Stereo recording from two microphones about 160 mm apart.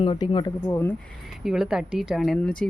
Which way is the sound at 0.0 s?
30° left (ahead or behind).